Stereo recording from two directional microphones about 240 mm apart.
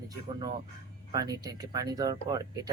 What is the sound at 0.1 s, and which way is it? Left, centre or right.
Speech, centre.